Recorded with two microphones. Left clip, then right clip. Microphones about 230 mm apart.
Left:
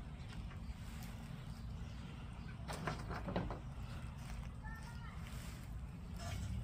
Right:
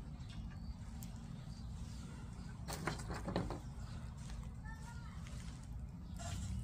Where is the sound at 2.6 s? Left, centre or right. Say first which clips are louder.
Right 1 dB; right.